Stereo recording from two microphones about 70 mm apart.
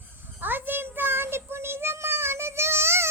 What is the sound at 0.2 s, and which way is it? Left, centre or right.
Child singing, right.